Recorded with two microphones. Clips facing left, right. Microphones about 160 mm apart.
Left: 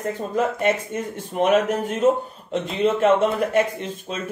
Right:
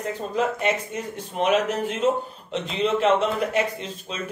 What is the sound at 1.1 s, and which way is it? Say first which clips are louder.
Speech: left 3 dB; 45° left (ahead or behind).